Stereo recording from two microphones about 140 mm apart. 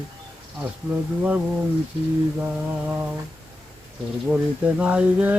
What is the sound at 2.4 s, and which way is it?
Speech, 15° right (ahead or behind).